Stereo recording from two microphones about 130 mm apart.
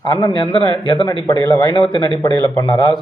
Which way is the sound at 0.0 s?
35° left (ahead or behind).